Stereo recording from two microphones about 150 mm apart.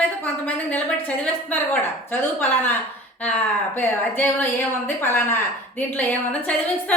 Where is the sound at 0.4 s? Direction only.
10° left (ahead or behind).